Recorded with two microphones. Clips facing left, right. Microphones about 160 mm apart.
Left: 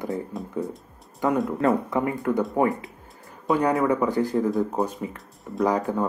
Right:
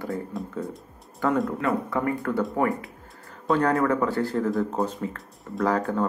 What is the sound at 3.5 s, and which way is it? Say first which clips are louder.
Speech: left 1 dB; 10° left (ahead or behind).